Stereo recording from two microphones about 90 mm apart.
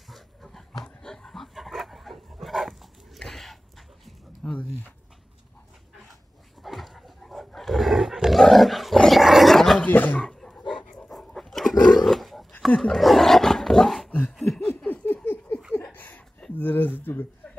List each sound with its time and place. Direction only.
0.1 s dog: centre (ahead or behind)
4.4 s a sound: 15° left (ahead or behind)
6.6 s roar: centre (ahead or behind)
9.8 s a sound: 20° left (ahead or behind)
10.2 s dog: 5° left (ahead or behind)
11.8 s roaring cats: 5° left (ahead or behind)
12.6 s roar: 5° left (ahead or behind)
14.8 s laughter: 15° left (ahead or behind)
15.2 s a sound: 20° left (ahead or behind)